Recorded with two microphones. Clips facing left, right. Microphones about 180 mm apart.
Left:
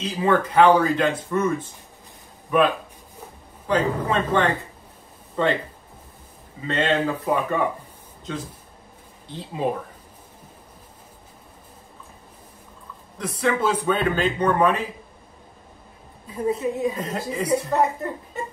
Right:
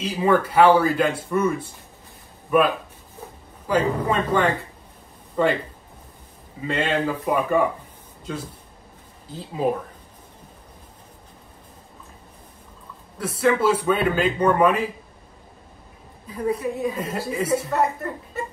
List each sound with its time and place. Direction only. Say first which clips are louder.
0.0 s a man's voice: right 1 dB; 10° right (ahead or behind)
3.6 s a man's voice: right 1 dB; 10° right (ahead or behind)
6.7 s a man's voice: left 1 dB; 10° right (ahead or behind)
9.3 s speech: right 2 dB; 5° right (ahead or behind)
13.2 s a man's voice: right 3 dB; 5° right (ahead or behind)
16.3 s a woman's voice: left 1 dB; 25° left (ahead or behind)
16.9 s speech: right 1 dB; 5° right (ahead or behind)
17.7 s a woman's voice: left 1 dB; 20° left (ahead or behind)